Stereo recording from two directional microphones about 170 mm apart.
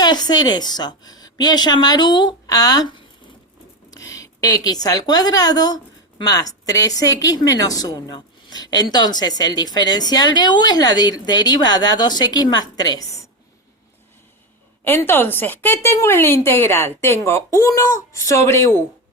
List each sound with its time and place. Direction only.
0.0 s a woman's voice: 25° left (ahead or behind)
3.9 s a woman's voice: 20° left (ahead or behind)
14.8 s speech: 10° left (ahead or behind)